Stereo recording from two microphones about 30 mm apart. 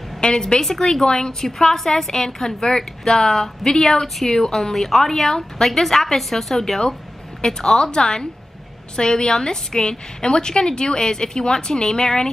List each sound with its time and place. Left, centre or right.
0.2 s a woman's voice: left
0.6 s a woman's voice: centre
1.0 s a woman's voice: left